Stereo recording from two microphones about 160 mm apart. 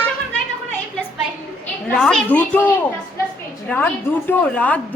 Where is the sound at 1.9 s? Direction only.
5° left (ahead or behind).